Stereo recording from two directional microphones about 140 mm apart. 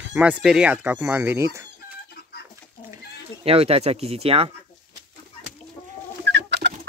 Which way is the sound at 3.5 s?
45° right (ahead or behind).